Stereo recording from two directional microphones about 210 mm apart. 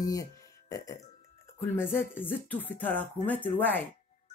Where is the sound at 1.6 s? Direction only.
10° left (ahead or behind).